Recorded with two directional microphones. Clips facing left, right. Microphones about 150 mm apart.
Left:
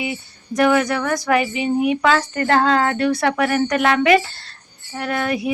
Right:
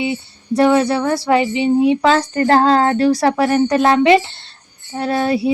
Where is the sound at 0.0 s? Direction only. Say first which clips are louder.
Right 5 dB; 30° right (ahead or behind).